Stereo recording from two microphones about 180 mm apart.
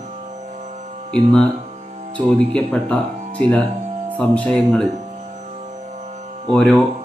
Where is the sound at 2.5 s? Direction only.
5° left (ahead or behind).